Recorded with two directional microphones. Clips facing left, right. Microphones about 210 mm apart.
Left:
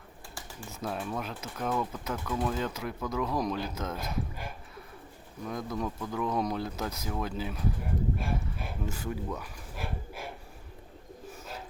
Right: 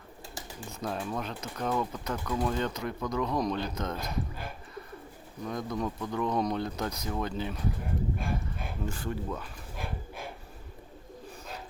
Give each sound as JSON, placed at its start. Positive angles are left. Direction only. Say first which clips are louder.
{"t": 0.7, "sound": "speech", "louder": "right 1 dB", "side_deg": 5}
{"t": 5.4, "sound": "speech", "louder": "right 1 dB", "side_deg": 5}
{"t": 9.4, "sound": "a sound", "louder": "even", "side_deg": 5}